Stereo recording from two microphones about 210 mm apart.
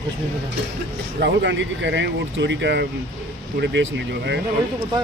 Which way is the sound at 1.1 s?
55° right (ahead or behind).